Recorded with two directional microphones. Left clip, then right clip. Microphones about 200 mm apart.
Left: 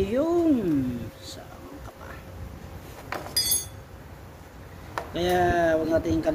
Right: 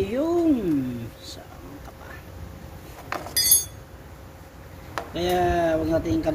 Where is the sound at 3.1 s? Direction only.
20° left (ahead or behind).